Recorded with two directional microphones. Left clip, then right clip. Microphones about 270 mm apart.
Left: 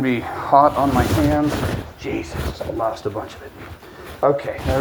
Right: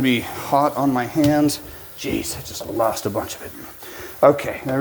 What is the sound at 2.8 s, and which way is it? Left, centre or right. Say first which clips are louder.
Cutlery: right 3 dB; right.